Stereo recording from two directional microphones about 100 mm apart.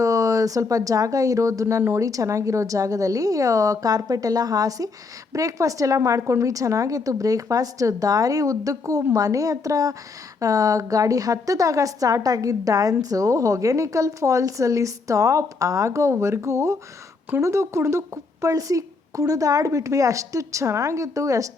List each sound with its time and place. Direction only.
0.0 s a woman's voice: 35° right (ahead or behind)